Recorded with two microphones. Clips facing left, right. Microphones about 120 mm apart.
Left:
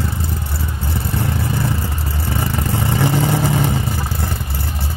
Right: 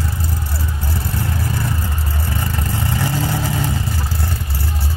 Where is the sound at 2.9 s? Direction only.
20° left (ahead or behind).